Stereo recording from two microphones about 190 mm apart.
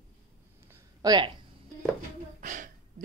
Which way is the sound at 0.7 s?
20° right (ahead or behind).